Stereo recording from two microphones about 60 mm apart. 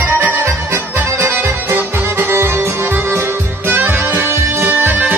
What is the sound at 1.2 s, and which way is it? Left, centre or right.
Music, right.